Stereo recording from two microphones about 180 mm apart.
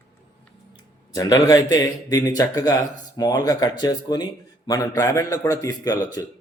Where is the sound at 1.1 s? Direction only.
20° left (ahead or behind).